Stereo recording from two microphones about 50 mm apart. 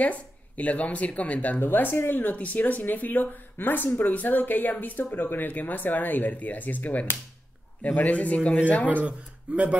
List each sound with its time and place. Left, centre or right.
0.0 s speech: left
1.6 s speech: left
2.3 s speech: left
8.8 s speech: right